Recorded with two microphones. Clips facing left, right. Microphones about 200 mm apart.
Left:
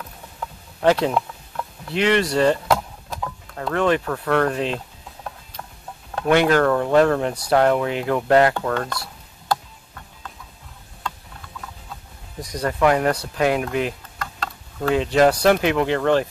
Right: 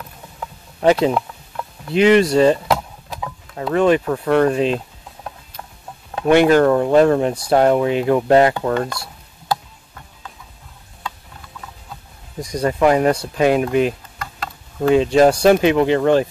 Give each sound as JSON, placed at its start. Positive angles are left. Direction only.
{"t": 0.8, "sound": "speech", "side_deg": -15}
{"t": 6.2, "sound": "speech", "side_deg": -15}
{"t": 12.4, "sound": "speech", "side_deg": -10}